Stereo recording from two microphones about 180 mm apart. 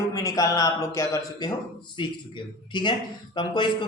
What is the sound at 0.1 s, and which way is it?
Speech, 20° left (ahead or behind).